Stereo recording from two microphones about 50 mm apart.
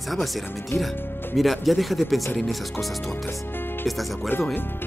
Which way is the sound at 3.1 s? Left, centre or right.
Left.